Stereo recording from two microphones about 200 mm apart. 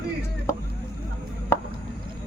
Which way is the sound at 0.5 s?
15° left (ahead or behind).